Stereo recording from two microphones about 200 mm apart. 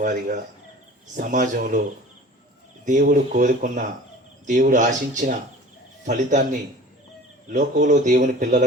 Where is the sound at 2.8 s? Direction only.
40° right (ahead or behind).